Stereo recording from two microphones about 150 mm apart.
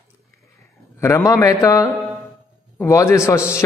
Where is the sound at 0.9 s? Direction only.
20° left (ahead or behind).